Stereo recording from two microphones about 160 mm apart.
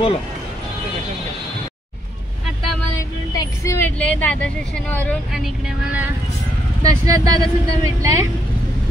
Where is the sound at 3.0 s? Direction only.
20° left (ahead or behind).